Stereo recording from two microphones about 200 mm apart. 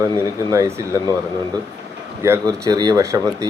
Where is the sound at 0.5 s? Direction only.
15° right (ahead or behind).